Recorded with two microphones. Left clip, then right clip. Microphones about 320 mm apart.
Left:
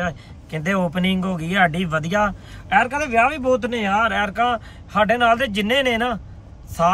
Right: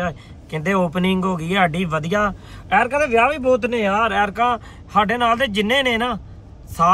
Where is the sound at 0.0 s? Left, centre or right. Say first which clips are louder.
Right 1 dB; centre.